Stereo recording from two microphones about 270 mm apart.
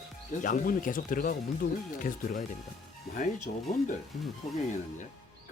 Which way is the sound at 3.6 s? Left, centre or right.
Centre.